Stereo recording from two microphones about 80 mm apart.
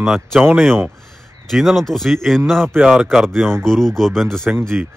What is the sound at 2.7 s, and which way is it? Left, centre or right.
Speech, centre.